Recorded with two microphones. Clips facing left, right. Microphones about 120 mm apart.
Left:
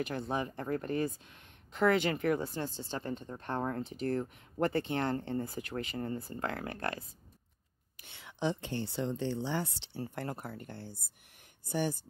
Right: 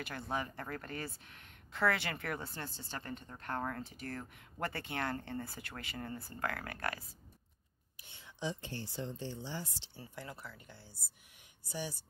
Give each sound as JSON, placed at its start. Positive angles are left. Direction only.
{"t": 0.0, "sound": "speech", "side_deg": 20}
{"t": 8.0, "sound": "speech", "side_deg": 75}